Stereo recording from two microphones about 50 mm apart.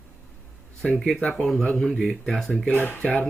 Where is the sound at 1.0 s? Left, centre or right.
Centre.